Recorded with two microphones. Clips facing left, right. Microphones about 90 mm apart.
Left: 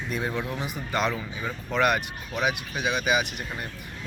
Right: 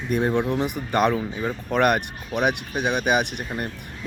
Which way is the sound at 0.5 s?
65° right (ahead or behind).